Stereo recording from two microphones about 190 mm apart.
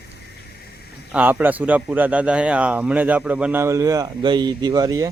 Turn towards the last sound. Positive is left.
turn(degrees=-20)  # may be behind; listen again after turning